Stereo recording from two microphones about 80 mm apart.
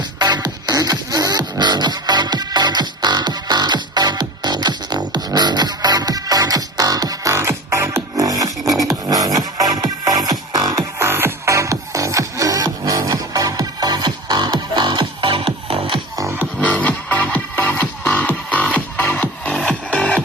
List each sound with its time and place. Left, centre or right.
0.2 s music: right
7.3 s music: right
10.8 s music: right
16.6 s music: centre
19.5 s music: centre